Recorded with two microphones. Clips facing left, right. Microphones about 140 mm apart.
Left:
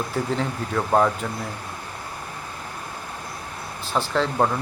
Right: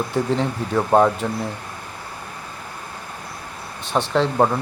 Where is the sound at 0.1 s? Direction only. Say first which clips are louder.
Right 4 dB; 20° right (ahead or behind).